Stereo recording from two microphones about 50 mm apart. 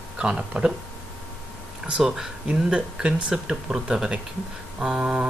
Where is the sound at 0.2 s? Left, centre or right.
Right.